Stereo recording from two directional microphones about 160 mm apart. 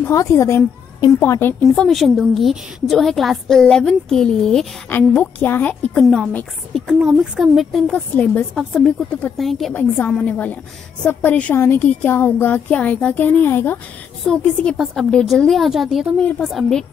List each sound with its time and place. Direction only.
0.0 s a woman's voice: 20° left (ahead or behind)
1.8 s a woman's voice: centre (ahead or behind)
9.8 s a woman's voice: 10° left (ahead or behind)